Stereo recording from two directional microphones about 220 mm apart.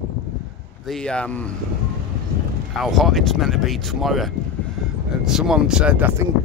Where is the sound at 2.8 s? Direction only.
Centre (ahead or behind).